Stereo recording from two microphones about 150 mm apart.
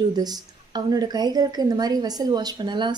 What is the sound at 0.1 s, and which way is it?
Speech, 25° right (ahead or behind).